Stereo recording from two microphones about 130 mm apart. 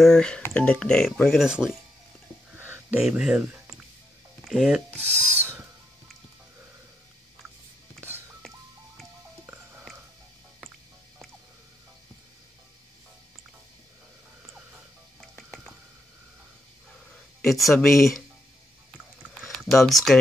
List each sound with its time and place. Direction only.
0.0 s speech: 5° left (ahead or behind)
2.5 s a sound: 15° right (ahead or behind)
3.0 s speech: 5° right (ahead or behind)
5.4 s a sound: 15° right (ahead or behind)
8.4 s music: centre (ahead or behind)
17.4 s speech: centre (ahead or behind)
19.4 s speech: centre (ahead or behind)